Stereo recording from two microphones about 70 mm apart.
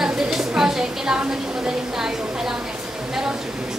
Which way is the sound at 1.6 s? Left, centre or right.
Centre.